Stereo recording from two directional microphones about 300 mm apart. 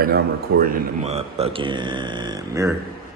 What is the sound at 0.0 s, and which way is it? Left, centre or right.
A man's voice, right.